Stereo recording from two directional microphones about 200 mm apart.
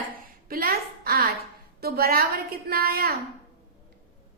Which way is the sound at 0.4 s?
45° right (ahead or behind).